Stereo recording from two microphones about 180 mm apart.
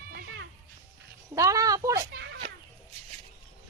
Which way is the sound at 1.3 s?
20° right (ahead or behind).